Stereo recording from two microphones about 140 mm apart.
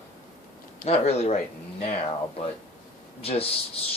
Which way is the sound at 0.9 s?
50° left (ahead or behind).